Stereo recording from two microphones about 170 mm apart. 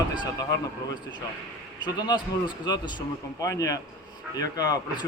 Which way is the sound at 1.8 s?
25° left (ahead or behind).